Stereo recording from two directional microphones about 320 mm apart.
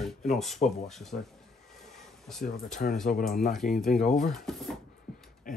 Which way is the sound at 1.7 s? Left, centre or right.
Centre.